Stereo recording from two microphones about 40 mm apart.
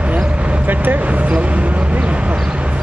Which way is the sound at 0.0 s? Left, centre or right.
Right.